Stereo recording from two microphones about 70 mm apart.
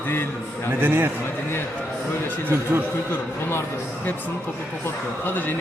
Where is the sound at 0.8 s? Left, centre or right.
Right.